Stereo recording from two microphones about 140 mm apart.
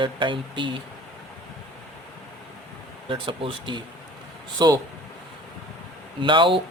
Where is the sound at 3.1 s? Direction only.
35° right (ahead or behind).